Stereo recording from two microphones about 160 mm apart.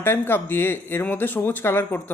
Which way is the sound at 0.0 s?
15° left (ahead or behind).